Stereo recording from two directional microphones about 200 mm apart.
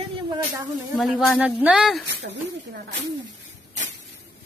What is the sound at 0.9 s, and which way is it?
Speech, centre (ahead or behind).